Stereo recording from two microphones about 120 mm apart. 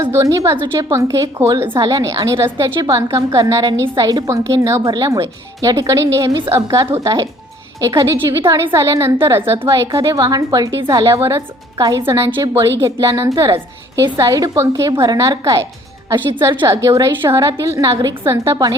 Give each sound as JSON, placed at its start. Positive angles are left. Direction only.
{"t": 0.0, "sound": "a woman's voice", "side_deg": -25}
{"t": 16.6, "sound": "a woman's voice", "side_deg": -25}